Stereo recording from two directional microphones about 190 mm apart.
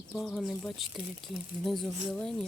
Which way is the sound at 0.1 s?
Centre (ahead or behind).